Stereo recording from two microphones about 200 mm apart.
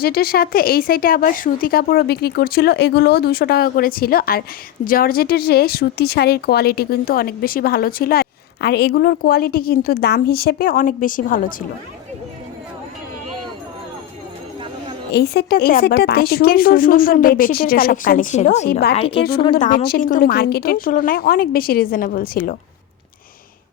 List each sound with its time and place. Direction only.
0.0 s speech: 50° left (ahead or behind)
15.1 s speech: 50° left (ahead or behind); by 18.7 s 35° left (ahead or behind)
18.7 s speech: 50° left (ahead or behind)
18.9 s a woman's voice: 30° left (ahead or behind)
19.5 s speech: 40° left (ahead or behind)